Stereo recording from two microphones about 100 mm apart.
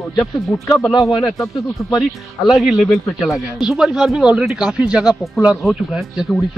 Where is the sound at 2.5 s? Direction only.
5° right (ahead or behind).